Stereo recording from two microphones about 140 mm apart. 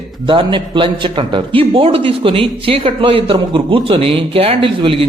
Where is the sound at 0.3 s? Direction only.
35° right (ahead or behind).